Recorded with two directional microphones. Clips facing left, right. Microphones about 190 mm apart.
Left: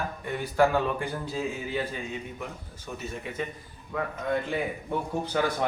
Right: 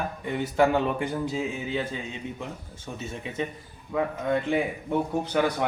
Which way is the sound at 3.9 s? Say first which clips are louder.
Right 5 dB; 15° right (ahead or behind).